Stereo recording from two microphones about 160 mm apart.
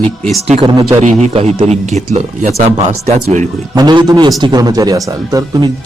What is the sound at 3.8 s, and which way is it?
A man's voice, 25° right (ahead or behind).